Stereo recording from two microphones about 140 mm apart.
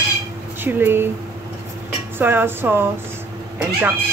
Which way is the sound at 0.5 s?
15° right (ahead or behind).